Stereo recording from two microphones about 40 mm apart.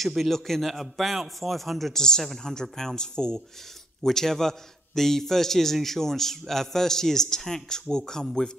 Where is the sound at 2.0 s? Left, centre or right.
Centre.